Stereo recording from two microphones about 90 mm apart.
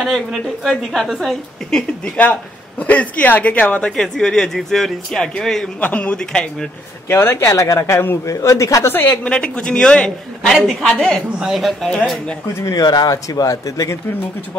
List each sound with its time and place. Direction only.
0.0 s a woman's voice: centre (ahead or behind)
2.8 s speech: 15° left (ahead or behind)
5.8 s speech: 15° left (ahead or behind)
7.1 s a man's voice: 25° left (ahead or behind)
8.9 s a woman's voice: 25° left (ahead or behind)
9.3 s a woman's voice: 15° left (ahead or behind)
12.6 s a man's voice: 45° left (ahead or behind)